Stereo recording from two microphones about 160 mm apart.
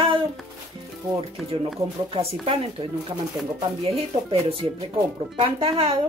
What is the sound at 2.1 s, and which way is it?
Speech, 35° right (ahead or behind).